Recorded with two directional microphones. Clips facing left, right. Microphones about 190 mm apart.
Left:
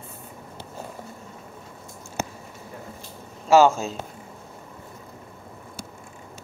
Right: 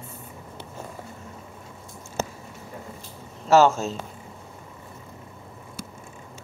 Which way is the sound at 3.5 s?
10° left (ahead or behind).